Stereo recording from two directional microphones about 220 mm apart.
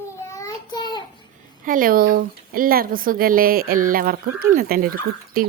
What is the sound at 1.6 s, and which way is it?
Speech, 40° right (ahead or behind).